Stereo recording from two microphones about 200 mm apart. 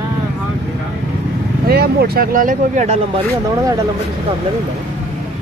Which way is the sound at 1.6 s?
50° right (ahead or behind).